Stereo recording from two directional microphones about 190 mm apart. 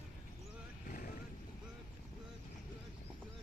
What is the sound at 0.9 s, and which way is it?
Vehicle, 45° left (ahead or behind).